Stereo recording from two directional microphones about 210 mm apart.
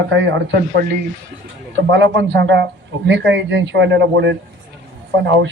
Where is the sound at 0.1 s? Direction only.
60° right (ahead or behind).